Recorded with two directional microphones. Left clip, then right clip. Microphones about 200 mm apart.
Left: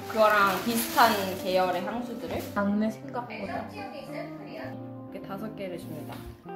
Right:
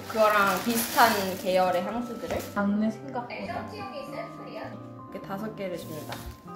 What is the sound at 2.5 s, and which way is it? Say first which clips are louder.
Speech: left 3 dB; 20° left (ahead or behind).